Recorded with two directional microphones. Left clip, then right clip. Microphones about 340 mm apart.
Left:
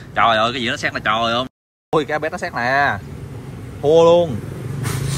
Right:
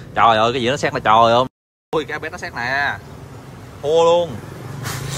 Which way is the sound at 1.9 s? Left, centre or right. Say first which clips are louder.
Left 4 dB; centre.